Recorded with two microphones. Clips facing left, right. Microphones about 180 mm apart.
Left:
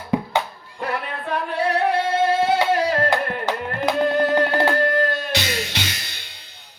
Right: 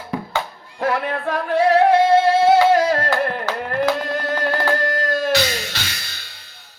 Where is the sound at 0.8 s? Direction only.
90° right.